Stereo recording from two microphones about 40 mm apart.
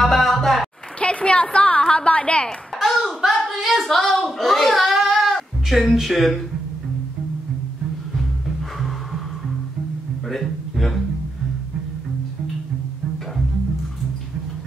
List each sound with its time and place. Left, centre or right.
0.0 s music: centre
0.9 s a sound: left
1.8 s a woman's voice: left
2.8 s clapping: centre
3.3 s speech: centre
10.3 s a sound: centre